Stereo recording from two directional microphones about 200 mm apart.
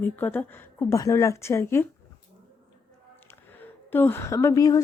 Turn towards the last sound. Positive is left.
turn(degrees=15)  # may be behind; listen again after turning